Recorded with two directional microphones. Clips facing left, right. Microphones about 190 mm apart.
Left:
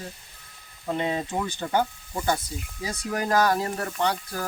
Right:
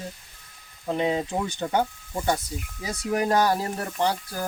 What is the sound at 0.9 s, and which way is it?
Speech, 15° right (ahead or behind).